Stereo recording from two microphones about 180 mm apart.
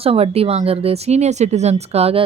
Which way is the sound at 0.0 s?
35° right (ahead or behind).